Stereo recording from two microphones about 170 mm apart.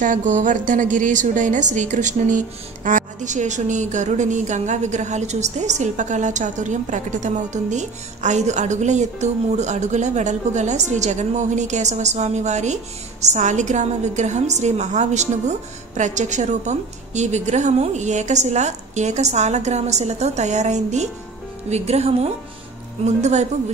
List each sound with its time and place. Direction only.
0.0 s a woman's voice: 50° right (ahead or behind)